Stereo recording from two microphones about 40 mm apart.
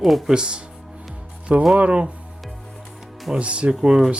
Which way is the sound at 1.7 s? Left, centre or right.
Right.